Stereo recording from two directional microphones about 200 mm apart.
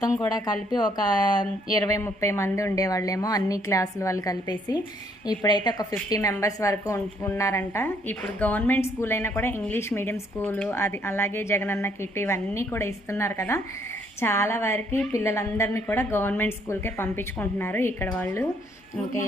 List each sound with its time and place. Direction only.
0.2 s a woman's voice: 20° left (ahead or behind)